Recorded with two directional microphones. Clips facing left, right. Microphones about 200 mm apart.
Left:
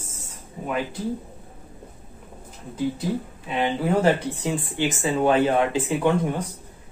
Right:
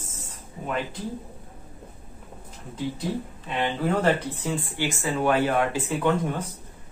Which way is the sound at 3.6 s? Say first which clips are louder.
Left 3 dB; 10° left (ahead or behind).